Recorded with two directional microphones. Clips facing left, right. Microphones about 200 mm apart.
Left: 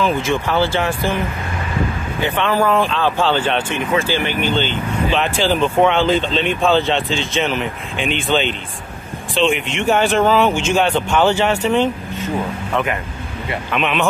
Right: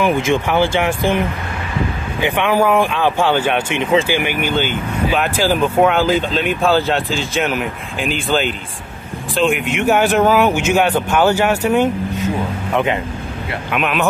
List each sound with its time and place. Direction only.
0.0 s speech: 15° right (ahead or behind)
2.2 s speech: 15° right (ahead or behind)
3.8 s speech: 25° right (ahead or behind)
4.1 s speech: 10° right (ahead or behind)
12.7 s speech: 20° right (ahead or behind)
13.5 s speech: 5° right (ahead or behind)